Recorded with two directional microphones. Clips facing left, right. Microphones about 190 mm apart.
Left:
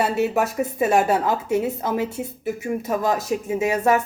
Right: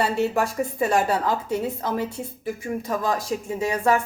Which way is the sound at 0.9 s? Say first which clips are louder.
Left 3 dB; 20° left (ahead or behind).